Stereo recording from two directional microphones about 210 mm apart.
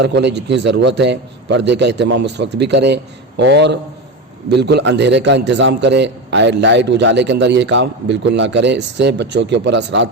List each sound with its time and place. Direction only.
0.0 s a man's voice: 55° right (ahead or behind)